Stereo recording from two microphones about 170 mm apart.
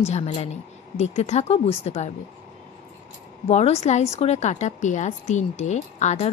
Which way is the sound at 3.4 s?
40° left (ahead or behind).